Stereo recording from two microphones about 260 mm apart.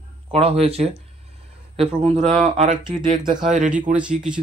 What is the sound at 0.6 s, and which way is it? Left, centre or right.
Speech, right.